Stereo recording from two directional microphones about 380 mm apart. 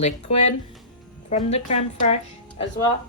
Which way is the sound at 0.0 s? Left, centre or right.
Centre.